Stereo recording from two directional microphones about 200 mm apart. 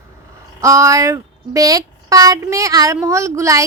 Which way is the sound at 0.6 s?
15° right (ahead or behind).